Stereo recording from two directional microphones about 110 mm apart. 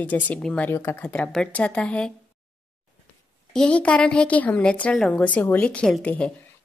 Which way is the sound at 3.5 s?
10° left (ahead or behind).